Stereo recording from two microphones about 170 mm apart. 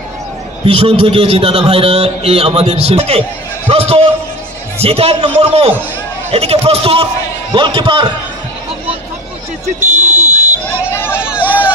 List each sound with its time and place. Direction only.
0.7 s a man's voice: 35° right (ahead or behind)
9.8 s a sound: 10° right (ahead or behind)
10.9 s hubbub: 15° left (ahead or behind)
11.1 s hubbub: 5° right (ahead or behind)